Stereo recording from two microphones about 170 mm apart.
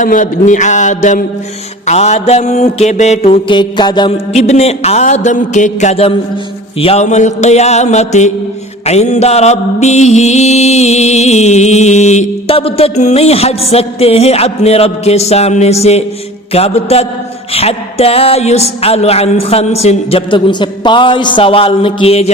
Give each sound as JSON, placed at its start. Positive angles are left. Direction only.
{"t": 0.0, "sound": "speech", "side_deg": 50}
{"t": 1.9, "sound": "mantra", "side_deg": 40}
{"t": 3.5, "sound": "a sound", "side_deg": 25}
{"t": 4.3, "sound": "mantra", "side_deg": 40}